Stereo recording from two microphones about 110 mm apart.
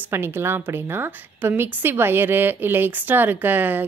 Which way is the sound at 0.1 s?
20° right (ahead or behind).